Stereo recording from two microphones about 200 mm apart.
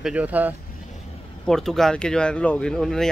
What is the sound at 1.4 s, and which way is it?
Speech, centre (ahead or behind).